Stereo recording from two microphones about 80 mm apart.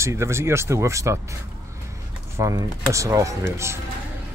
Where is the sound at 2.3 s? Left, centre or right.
Right.